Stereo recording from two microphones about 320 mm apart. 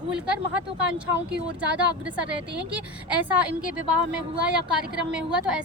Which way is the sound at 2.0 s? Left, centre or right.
Centre.